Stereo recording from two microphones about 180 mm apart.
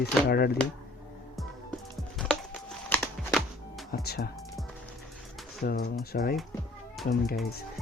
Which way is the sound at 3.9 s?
60° left (ahead or behind).